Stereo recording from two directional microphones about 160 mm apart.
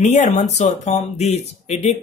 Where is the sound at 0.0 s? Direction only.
45° left (ahead or behind).